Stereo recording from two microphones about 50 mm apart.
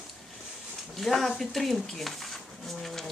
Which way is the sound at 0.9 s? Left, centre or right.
Centre.